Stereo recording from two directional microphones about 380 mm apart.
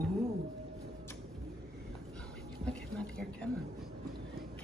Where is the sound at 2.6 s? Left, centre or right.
Centre.